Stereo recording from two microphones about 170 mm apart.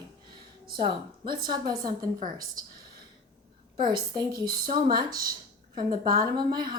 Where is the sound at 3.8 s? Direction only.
25° right (ahead or behind).